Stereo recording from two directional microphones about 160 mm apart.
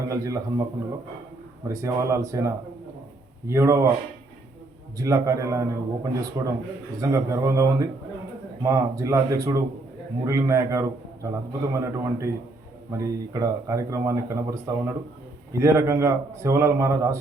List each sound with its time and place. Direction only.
0.1 s a man's voice: 20° right (ahead or behind)
4.9 s a man's voice: 20° right (ahead or behind)